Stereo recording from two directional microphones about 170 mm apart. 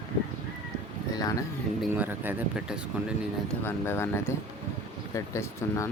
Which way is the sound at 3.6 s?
15° left (ahead or behind).